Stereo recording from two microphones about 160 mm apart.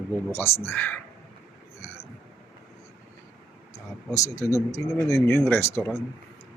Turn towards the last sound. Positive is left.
turn(degrees=15)  # may be behind; listen again after turning